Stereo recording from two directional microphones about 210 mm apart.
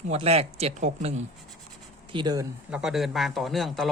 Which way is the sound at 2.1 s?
20° right (ahead or behind).